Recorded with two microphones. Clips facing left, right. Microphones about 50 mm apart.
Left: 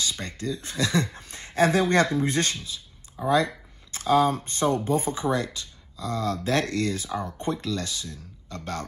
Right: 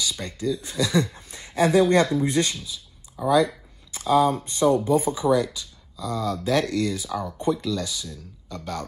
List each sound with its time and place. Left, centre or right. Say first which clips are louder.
0.0 s speech: right 3 dB; left
3.2 s speech: right 3 dB; left